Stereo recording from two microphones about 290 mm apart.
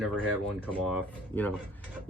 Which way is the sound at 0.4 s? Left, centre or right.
Centre.